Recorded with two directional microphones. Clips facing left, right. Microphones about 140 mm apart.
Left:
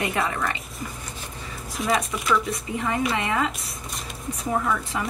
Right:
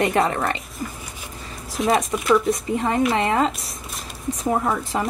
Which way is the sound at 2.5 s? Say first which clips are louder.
Right 5 dB; 35° right (ahead or behind).